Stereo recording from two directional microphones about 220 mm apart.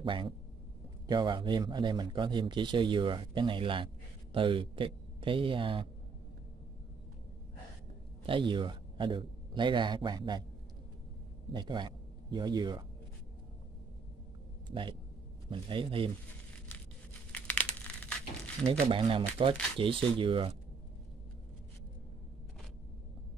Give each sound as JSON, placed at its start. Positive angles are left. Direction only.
{"t": 0.0, "sound": "a man's voice", "side_deg": -20}
{"t": 8.3, "sound": "a man's voice", "side_deg": -20}
{"t": 11.5, "sound": "a man's voice", "side_deg": -20}
{"t": 14.7, "sound": "a man's voice", "side_deg": -20}
{"t": 17.3, "sound": "crushing", "side_deg": 5}
{"t": 18.7, "sound": "a man's voice", "side_deg": -25}